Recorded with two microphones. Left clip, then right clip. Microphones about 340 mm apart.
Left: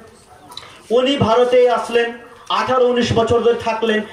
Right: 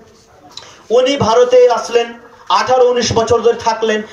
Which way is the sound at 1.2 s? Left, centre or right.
Centre.